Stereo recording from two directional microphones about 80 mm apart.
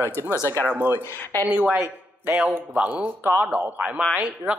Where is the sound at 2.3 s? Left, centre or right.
Centre.